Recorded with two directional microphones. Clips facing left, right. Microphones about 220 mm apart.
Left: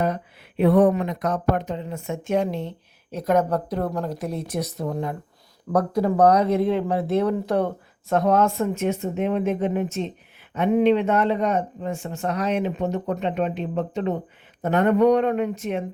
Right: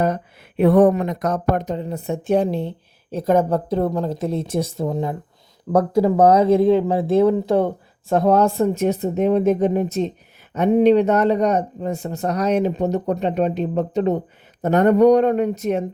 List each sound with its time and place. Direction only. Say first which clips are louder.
0.0 s speech: right 4 dB; 45° right (ahead or behind)